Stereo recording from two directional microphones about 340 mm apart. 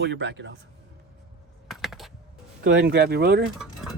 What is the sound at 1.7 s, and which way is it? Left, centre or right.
Typing, centre.